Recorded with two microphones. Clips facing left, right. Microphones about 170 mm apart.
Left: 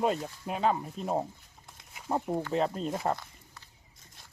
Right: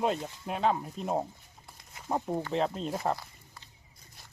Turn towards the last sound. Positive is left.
turn(degrees=0)  # may be behind; listen again after turning